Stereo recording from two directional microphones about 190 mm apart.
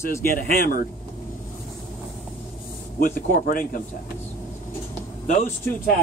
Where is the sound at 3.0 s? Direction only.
45° left (ahead or behind).